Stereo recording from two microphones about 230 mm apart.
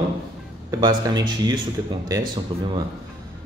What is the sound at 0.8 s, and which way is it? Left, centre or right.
Speech, centre.